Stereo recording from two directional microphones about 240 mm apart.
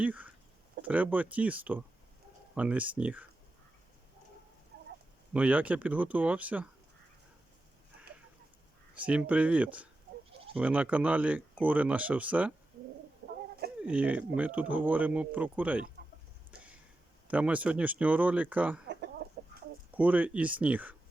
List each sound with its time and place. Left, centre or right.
0.0 s speech: centre
5.3 s speech: centre
9.0 s speech: centre
13.8 s speech: centre
17.2 s speech: centre
19.2 s chicken: right
19.9 s speech: centre